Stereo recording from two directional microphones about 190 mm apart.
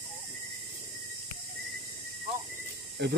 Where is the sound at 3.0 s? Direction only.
60° right (ahead or behind).